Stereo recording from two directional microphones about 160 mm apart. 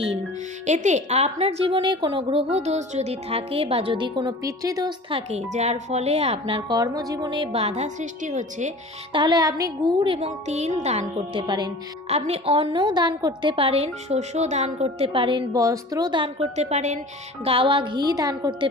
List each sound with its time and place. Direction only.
0.6 s a woman's voice: 50° right (ahead or behind)
5.5 s a woman's voice: 45° right (ahead or behind)
9.1 s a woman's voice: 30° right (ahead or behind); by 11.0 s 45° right (ahead or behind)
11.0 s a woman's voice: 30° right (ahead or behind)
12.0 s a woman's voice: 40° right (ahead or behind); by 18.7 s 25° right (ahead or behind)